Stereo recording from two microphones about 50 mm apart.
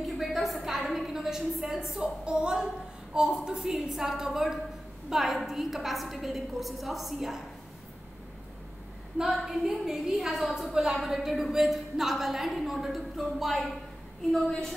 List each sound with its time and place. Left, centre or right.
0.0 s a woman's voice: centre
2.0 s a woman's voice: centre
9.3 s a woman's voice: centre